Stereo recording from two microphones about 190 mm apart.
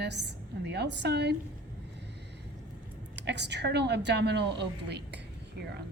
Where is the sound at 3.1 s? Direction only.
65° right (ahead or behind).